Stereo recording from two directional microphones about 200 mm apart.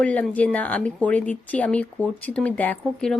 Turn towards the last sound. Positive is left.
turn(degrees=5)  # may be behind; listen again after turning